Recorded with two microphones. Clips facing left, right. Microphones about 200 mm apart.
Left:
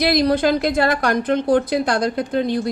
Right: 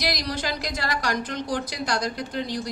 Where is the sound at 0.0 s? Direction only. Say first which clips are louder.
Left 12 dB; 55° left (ahead or behind).